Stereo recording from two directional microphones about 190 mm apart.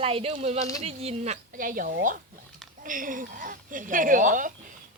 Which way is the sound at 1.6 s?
45° right (ahead or behind).